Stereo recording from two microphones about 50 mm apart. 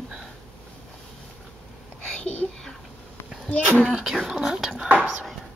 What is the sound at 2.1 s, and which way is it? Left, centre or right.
Whispering, left.